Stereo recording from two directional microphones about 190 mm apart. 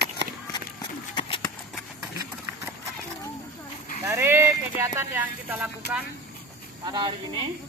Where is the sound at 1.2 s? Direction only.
25° left (ahead or behind).